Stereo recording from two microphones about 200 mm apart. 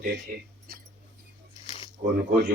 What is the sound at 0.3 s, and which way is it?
Speech, 45° right (ahead or behind).